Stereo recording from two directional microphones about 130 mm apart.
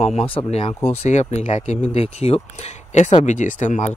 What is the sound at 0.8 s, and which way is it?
Speech, 60° left (ahead or behind).